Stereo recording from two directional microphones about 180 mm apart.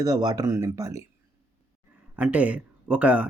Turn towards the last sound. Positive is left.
turn(degrees=-5)  # may be behind; listen again after turning